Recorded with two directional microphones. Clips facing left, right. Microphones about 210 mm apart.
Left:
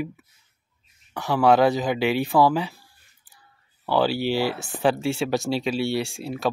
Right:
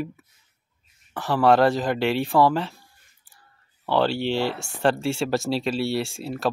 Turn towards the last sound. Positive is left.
turn(degrees=0)  # may be behind; listen again after turning